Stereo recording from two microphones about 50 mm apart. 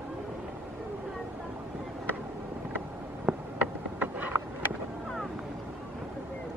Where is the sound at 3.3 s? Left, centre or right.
Right.